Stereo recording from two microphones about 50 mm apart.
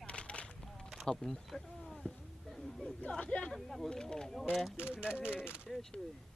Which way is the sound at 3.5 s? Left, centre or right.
Centre.